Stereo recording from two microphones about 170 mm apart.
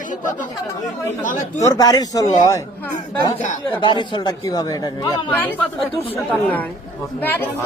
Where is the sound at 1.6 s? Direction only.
20° left (ahead or behind).